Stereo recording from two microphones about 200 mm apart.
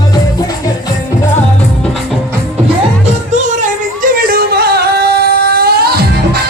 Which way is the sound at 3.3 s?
40° right (ahead or behind).